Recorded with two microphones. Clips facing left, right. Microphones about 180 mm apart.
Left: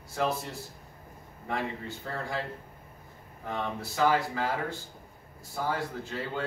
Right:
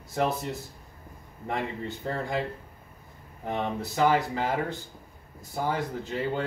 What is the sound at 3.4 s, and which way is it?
Speech, 20° right (ahead or behind).